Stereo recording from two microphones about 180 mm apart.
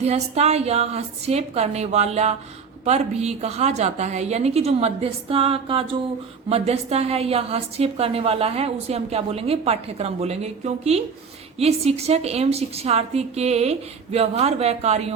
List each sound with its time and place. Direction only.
0.0 s a woman's voice: 35° right (ahead or behind)